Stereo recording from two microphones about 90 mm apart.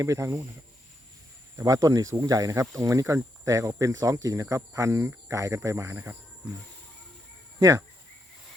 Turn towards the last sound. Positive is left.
turn(degrees=-40)  # may be behind; listen again after turning